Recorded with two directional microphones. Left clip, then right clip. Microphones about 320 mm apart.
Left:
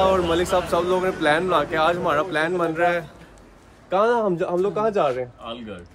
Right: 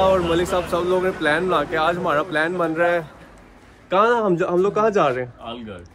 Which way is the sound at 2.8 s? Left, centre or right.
Centre.